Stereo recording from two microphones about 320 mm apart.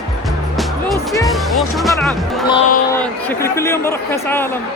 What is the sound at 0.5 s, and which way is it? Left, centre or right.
Music, centre.